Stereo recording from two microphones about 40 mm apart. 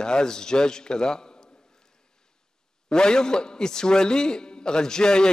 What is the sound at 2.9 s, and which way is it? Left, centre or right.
A man's voice, centre.